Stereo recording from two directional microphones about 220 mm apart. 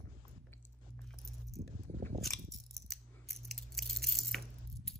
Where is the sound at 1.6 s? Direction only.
35° right (ahead or behind).